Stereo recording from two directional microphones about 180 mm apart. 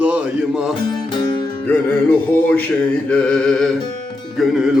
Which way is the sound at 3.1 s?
5° left (ahead or behind).